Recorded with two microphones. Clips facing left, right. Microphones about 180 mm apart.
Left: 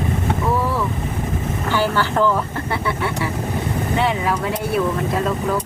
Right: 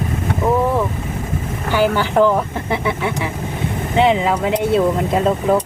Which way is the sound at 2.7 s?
20° right (ahead or behind).